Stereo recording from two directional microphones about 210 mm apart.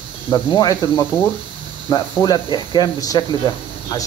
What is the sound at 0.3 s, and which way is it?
Speech, 15° left (ahead or behind).